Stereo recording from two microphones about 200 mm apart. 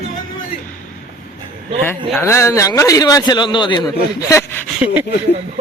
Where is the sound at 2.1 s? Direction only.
10° left (ahead or behind).